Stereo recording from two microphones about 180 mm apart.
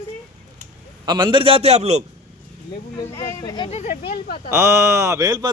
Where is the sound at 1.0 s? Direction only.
25° right (ahead or behind).